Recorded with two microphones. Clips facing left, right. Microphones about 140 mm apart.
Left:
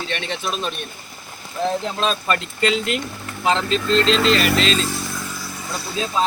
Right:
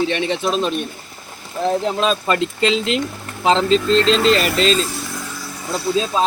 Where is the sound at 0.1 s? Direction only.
20° right (ahead or behind); by 1.7 s 35° right (ahead or behind).